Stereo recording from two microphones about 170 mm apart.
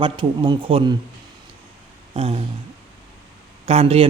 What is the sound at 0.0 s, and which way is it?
Speech, 30° right (ahead or behind).